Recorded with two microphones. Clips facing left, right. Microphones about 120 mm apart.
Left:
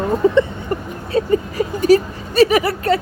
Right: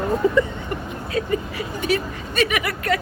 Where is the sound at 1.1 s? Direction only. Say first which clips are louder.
Left 7 dB; 35° left (ahead or behind).